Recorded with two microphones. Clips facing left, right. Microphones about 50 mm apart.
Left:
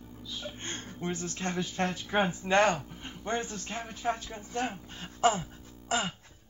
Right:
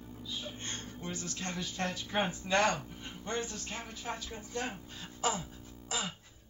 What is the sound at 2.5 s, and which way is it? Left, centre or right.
Speech, left.